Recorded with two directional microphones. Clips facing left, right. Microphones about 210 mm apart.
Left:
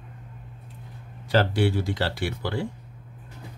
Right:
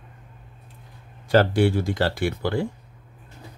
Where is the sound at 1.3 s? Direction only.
50° right (ahead or behind).